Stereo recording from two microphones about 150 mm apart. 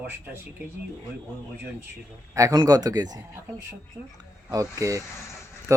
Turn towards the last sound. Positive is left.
turn(degrees=-20)  # may be behind; listen again after turning